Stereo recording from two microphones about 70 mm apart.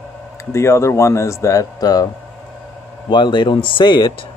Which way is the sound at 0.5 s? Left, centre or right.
Left.